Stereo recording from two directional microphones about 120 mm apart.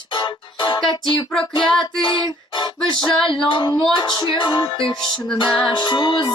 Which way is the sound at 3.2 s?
45° left (ahead or behind).